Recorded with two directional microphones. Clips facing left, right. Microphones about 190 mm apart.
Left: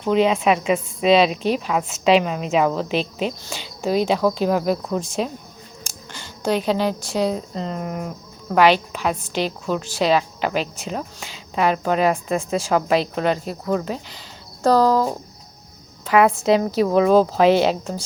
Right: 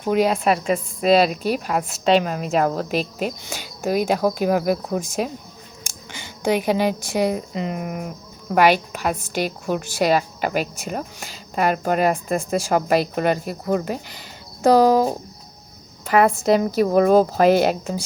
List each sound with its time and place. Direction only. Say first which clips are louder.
0.0 s a woman's voice: left 1 dB; 10° right (ahead or behind)
16.0 s a woman's voice: left 1 dB; centre (ahead or behind)
16.3 s a woman's voice: even; 55° right (ahead or behind)
16.8 s a woman's voice: even; 5° right (ahead or behind)
17.4 s speech: even; 45° right (ahead or behind)